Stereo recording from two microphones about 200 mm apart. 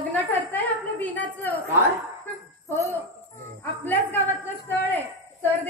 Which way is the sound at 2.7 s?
15° right (ahead or behind).